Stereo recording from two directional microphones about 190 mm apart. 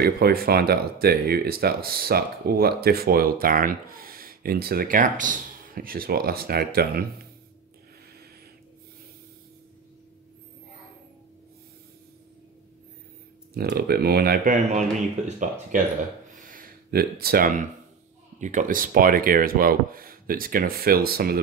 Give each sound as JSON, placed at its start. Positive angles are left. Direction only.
{"t": 0.0, "sound": "speech", "side_deg": -55}
{"t": 13.6, "sound": "speech", "side_deg": -55}
{"t": 16.3, "sound": "a sound", "side_deg": -45}
{"t": 18.4, "sound": "speech", "side_deg": -40}